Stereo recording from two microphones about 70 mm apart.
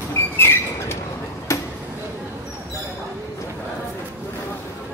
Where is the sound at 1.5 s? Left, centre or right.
Left.